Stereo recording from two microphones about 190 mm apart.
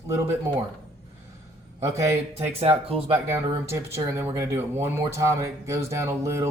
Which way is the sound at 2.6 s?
30° right (ahead or behind).